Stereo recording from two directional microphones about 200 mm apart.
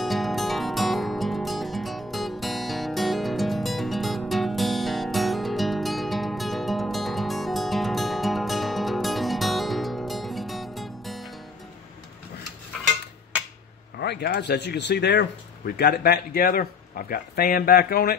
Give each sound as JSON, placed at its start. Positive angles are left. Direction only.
{"t": 0.0, "sound": "music", "side_deg": 0}
{"t": 13.9, "sound": "speech", "side_deg": 55}